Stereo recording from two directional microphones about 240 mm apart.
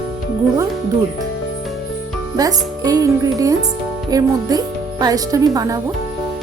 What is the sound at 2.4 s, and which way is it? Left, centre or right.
Speech, centre.